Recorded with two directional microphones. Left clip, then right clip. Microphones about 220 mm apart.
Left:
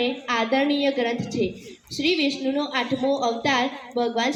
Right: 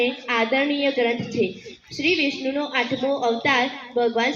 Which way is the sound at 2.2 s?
45° left (ahead or behind).